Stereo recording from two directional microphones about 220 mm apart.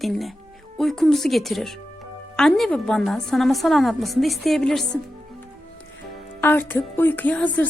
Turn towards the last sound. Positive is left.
turn(degrees=5)  # may be behind; listen again after turning